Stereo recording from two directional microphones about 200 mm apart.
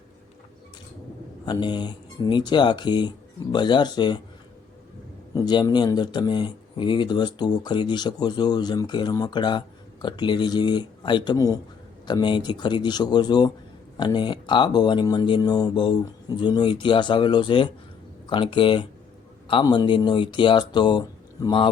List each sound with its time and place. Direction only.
1.5 s speech: 20° left (ahead or behind)
5.3 s speech: 20° left (ahead or behind)